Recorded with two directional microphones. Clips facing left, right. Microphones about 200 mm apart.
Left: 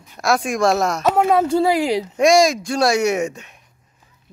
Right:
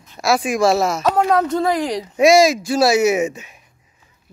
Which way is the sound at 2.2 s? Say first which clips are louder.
Right 3 dB; 5° right (ahead or behind).